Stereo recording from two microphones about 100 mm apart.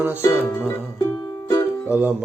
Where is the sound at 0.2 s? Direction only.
30° left (ahead or behind).